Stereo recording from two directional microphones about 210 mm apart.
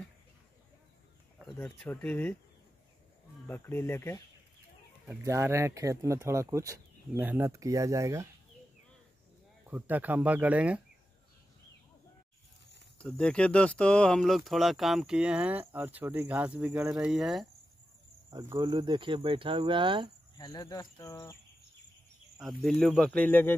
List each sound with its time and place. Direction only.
1.4 s speech: 5° left (ahead or behind)
3.4 s speech: 10° left (ahead or behind)
5.0 s speech: 15° right (ahead or behind)
9.7 s speech: 10° right (ahead or behind)
13.0 s speech: 5° left (ahead or behind)
18.3 s speech: 15° right (ahead or behind)
20.3 s speech: 20° left (ahead or behind)
22.4 s speech: centre (ahead or behind)